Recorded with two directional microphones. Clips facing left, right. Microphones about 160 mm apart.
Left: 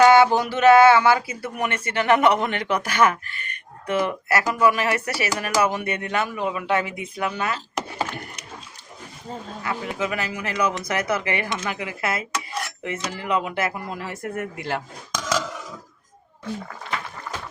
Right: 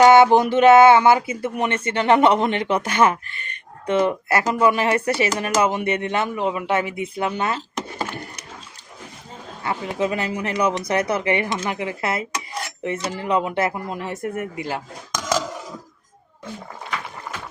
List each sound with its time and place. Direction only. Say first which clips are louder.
0.0 s a sound: right 2 dB; 20° right (ahead or behind)
0.3 s speech: right 3 dB; 25° right (ahead or behind)
9.6 s speech: right 4 dB; 30° right (ahead or behind)